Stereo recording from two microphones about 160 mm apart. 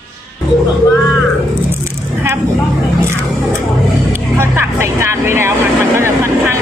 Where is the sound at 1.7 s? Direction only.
15° right (ahead or behind).